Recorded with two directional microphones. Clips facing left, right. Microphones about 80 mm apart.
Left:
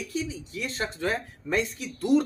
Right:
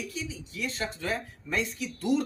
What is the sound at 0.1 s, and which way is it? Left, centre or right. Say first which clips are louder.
Speech: left 6 dB; left.